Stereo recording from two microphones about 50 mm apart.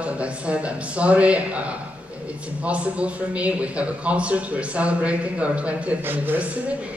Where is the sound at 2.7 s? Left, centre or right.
Right.